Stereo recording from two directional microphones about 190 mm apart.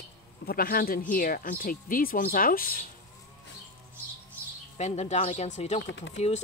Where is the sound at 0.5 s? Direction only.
50° left (ahead or behind).